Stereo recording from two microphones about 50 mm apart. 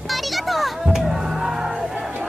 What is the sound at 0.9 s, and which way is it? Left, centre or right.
Music, centre.